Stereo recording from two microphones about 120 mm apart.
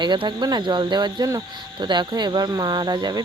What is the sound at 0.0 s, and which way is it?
Speech, 40° right (ahead or behind).